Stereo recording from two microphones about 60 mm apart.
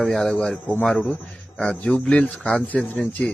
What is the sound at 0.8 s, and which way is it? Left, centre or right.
A man's voice, centre.